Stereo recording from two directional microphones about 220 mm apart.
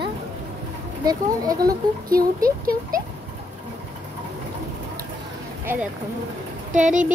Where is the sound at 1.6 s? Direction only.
40° right (ahead or behind).